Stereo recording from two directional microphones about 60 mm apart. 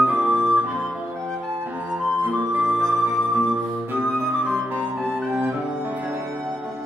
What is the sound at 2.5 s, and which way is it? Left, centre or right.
Music, right.